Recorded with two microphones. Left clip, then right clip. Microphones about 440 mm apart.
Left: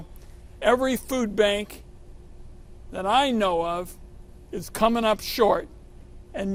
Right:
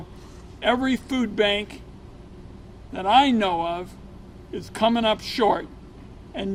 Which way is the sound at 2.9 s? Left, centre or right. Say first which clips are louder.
Right 4 dB; left.